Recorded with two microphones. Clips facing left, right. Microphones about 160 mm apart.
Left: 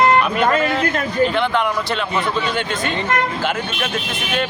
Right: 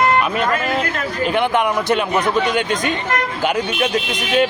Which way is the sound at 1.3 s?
15° right (ahead or behind).